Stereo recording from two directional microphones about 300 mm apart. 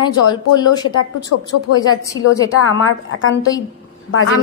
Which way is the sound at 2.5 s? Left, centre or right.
Left.